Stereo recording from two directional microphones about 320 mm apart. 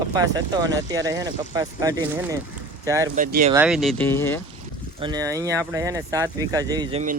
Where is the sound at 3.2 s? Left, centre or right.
Right.